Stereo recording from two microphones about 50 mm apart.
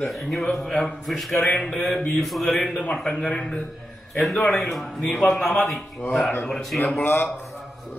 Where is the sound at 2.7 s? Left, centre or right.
Centre.